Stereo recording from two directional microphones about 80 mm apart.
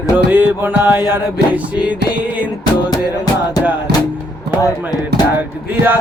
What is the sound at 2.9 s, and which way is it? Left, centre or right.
Music, left.